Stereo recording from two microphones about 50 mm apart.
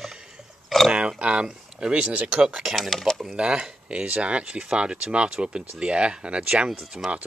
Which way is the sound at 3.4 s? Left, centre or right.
Right.